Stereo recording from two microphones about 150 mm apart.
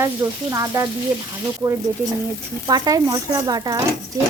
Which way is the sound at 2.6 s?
25° right (ahead or behind).